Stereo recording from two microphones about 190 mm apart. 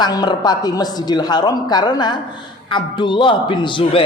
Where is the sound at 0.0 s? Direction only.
20° left (ahead or behind).